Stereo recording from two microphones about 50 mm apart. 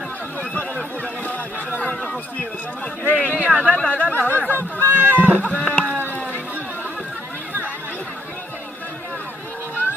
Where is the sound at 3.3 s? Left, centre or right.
Right.